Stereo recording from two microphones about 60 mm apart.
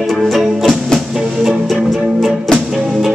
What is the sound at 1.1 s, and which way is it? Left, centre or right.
Music, centre.